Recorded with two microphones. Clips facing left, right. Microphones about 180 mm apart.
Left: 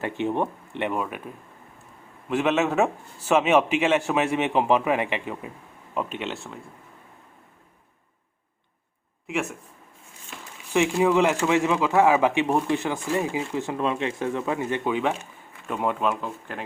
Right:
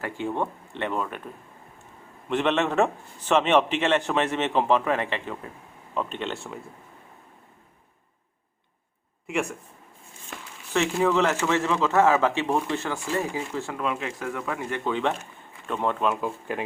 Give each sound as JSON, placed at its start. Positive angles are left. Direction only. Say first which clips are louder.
{"t": 0.0, "sound": "a man's voice", "louder": "left 3 dB", "side_deg": 20}
{"t": 2.3, "sound": "a man's voice", "louder": "left 1 dB", "side_deg": 5}
{"t": 9.2, "sound": "speech", "louder": "right 1 dB", "side_deg": 0}
{"t": 11.0, "sound": "a man's voice", "louder": "left 1 dB", "side_deg": 15}